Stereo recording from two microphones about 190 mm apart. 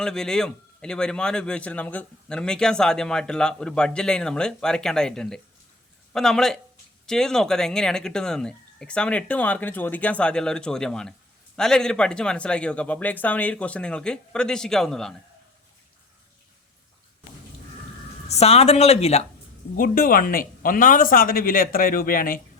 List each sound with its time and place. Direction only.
0.0 s speech: 5° left (ahead or behind)
18.3 s speech: 35° left (ahead or behind)
19.7 s speech: 50° left (ahead or behind)